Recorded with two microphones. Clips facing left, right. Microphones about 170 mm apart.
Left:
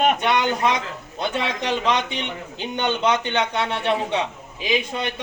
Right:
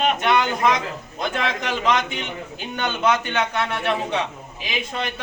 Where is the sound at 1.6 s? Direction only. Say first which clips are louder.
Even; 30° left (ahead or behind).